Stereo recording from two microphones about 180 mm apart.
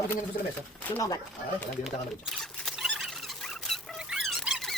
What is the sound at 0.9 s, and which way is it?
Speech, 15° left (ahead or behind).